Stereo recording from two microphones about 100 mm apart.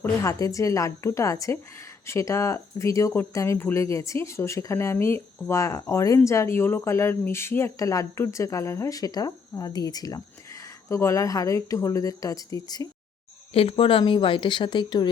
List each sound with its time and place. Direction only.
0.2 s speech: 35° left (ahead or behind)
13.5 s speech: 70° left (ahead or behind)
14.0 s speech: 55° left (ahead or behind)